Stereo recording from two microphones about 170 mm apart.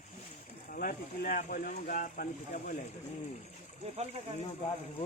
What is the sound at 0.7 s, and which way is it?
Speech, 55° left (ahead or behind).